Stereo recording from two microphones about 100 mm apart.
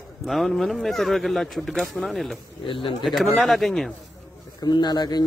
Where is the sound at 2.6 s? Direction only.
60° left (ahead or behind).